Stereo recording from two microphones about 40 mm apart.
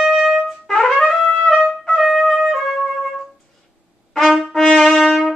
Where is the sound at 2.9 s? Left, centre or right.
Centre.